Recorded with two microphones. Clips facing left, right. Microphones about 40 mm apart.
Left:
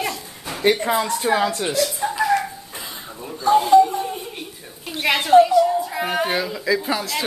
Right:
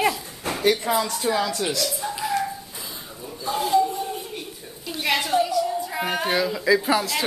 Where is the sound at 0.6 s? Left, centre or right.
Left.